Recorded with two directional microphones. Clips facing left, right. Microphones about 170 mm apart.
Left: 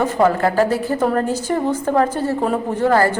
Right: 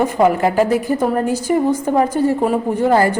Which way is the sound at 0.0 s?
15° right (ahead or behind).